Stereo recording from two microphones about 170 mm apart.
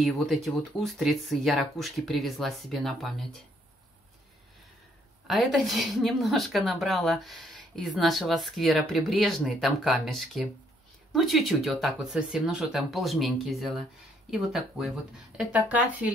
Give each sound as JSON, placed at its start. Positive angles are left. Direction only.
{"t": 0.0, "sound": "a woman's voice", "side_deg": 0}
{"t": 5.2, "sound": "a woman's voice", "side_deg": 0}